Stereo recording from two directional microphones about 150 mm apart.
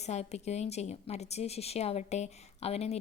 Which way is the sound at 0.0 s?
45° left (ahead or behind).